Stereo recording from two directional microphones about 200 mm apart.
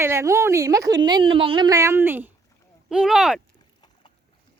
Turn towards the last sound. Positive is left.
turn(degrees=-5)  # may be behind; listen again after turning